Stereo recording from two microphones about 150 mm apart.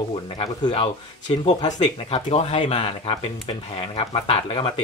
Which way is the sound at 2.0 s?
45° left (ahead or behind).